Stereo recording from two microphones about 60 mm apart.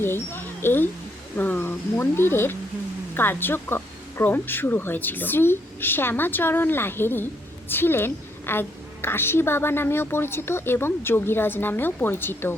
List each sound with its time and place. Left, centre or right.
0.0 s mouse: left
1.4 s a woman's voice: left